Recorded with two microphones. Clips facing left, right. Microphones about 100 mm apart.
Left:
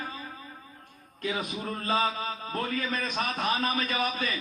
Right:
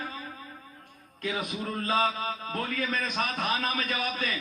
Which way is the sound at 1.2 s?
35° left (ahead or behind).